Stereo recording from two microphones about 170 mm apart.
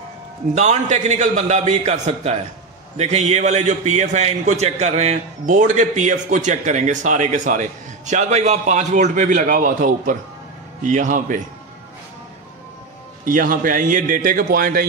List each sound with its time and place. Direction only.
0.6 s a man's voice: 40° right (ahead or behind)
13.2 s a man's voice: 55° right (ahead or behind)